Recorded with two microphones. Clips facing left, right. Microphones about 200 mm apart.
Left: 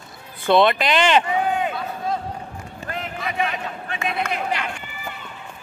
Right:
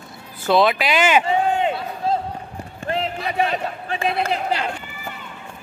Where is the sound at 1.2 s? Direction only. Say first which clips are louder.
Right 3 dB; 25° right (ahead or behind).